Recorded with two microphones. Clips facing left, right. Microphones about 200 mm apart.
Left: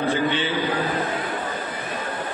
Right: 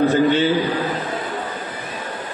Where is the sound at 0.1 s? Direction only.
40° right (ahead or behind).